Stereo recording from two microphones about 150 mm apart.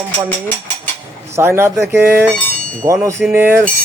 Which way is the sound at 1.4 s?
15° right (ahead or behind).